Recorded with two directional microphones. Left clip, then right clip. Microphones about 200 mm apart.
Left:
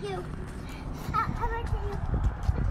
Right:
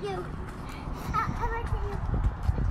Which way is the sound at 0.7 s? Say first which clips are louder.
Right 1 dB; 5° right (ahead or behind).